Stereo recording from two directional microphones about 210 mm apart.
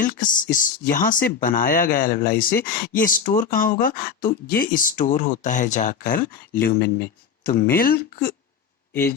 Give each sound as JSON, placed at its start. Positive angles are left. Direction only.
{"t": 0.0, "sound": "speech", "side_deg": 40}